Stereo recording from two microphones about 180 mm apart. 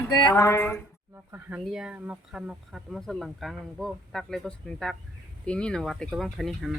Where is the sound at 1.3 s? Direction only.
10° right (ahead or behind).